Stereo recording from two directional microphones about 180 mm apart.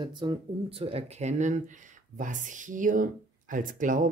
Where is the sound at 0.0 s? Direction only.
30° right (ahead or behind).